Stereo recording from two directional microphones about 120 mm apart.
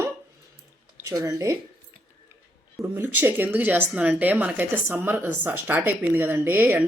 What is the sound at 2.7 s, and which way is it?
Speech, 15° right (ahead or behind).